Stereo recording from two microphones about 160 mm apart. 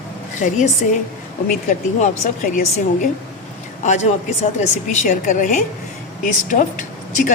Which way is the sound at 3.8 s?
50° left (ahead or behind).